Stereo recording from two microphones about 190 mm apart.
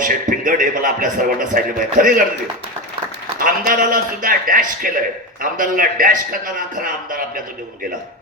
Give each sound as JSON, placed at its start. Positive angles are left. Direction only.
{"t": 0.0, "sound": "a man's voice", "side_deg": -45}
{"t": 3.3, "sound": "a man's voice", "side_deg": -50}